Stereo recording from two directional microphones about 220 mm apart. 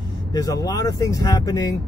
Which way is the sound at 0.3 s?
15° left (ahead or behind).